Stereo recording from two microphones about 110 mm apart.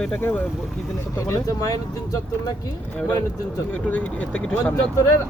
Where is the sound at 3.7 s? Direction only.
15° left (ahead or behind).